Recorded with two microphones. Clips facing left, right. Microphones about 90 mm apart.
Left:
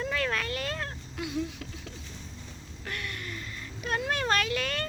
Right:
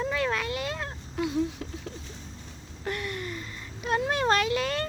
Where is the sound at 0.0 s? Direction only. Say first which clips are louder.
Right 2 dB; 20° right (ahead or behind).